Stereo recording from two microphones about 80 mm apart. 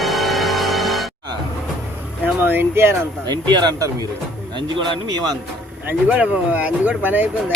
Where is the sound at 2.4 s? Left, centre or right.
Right.